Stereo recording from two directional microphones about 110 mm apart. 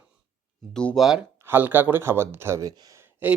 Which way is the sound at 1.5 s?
20° right (ahead or behind).